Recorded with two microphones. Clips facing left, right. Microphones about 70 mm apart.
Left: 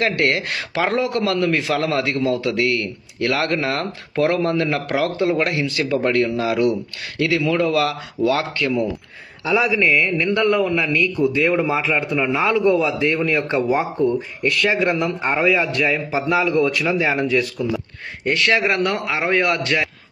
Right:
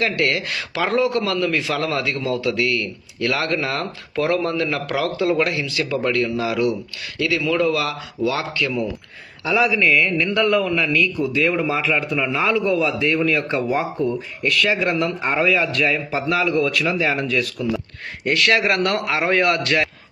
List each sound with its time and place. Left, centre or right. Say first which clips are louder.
0.0 s a man's voice: left 1 dB; left
9.4 s a man's voice: even; centre
9.8 s a sound: even; left
10.4 s a man's voice: left 1 dB; centre
10.7 s a man's voice: even; centre
11.2 s a man's voice: left 2 dB; centre
11.8 s a man's voice: left 1 dB; centre
18.3 s a man's voice: even; centre